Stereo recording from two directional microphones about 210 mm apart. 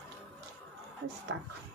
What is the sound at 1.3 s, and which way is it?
Speech, 65° right (ahead or behind).